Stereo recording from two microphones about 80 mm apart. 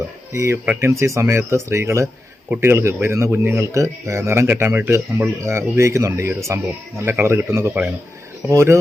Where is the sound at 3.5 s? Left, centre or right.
Right.